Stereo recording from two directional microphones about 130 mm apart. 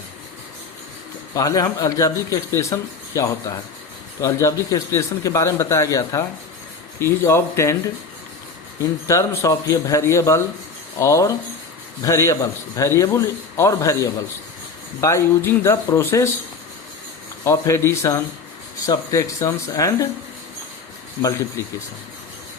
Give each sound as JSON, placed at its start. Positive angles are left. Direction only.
{"t": 1.4, "sound": "speech", "side_deg": 25}
{"t": 4.2, "sound": "speech", "side_deg": 25}
{"t": 8.8, "sound": "speech", "side_deg": 25}
{"t": 17.4, "sound": "speech", "side_deg": 25}